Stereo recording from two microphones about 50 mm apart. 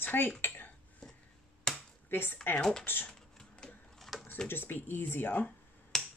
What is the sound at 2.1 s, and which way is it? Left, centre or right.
Speech, left.